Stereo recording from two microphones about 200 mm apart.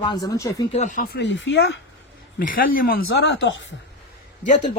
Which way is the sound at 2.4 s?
45° left (ahead or behind).